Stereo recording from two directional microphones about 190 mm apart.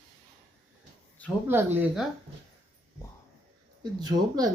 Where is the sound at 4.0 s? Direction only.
20° right (ahead or behind).